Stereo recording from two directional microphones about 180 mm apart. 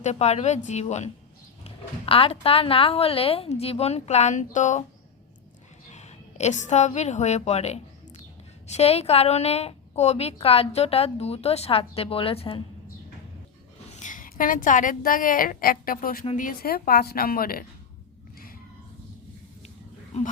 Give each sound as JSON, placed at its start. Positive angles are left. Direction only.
{"t": 0.0, "sound": "a woman's voice", "side_deg": 40}
{"t": 5.9, "sound": "a woman's voice", "side_deg": 40}
{"t": 13.9, "sound": "a woman's voice", "side_deg": 45}